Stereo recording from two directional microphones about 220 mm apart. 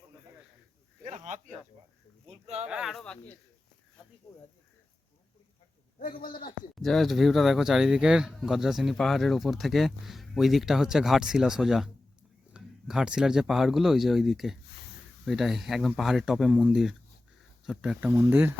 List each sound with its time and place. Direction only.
1.0 s speech: 35° right (ahead or behind)
2.6 s speech: 5° right (ahead or behind); by 4.4 s 15° left (ahead or behind)
6.0 s speech: 40° left (ahead or behind)
6.7 s speech: centre (ahead or behind)